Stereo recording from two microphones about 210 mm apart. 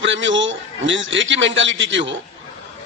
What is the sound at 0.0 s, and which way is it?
A man's voice, 60° right (ahead or behind).